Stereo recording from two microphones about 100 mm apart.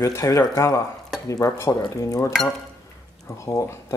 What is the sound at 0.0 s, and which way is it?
Dishes, 30° left (ahead or behind).